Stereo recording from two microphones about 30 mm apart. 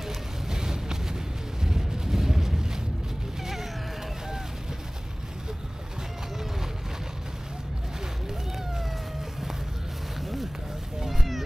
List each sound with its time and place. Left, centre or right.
0.0 s vehicle: centre
10.2 s a sound: centre
11.1 s cat: centre